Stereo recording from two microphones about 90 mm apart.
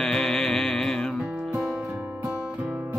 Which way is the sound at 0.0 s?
5° left (ahead or behind).